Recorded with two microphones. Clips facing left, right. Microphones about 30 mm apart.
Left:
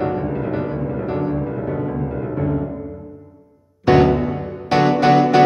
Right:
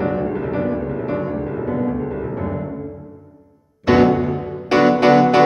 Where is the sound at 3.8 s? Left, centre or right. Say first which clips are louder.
Even; right.